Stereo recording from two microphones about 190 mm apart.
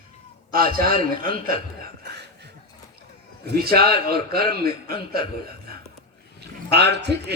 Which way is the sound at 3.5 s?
55° right (ahead or behind).